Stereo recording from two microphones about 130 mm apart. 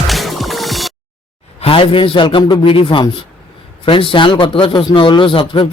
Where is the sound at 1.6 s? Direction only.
45° left (ahead or behind).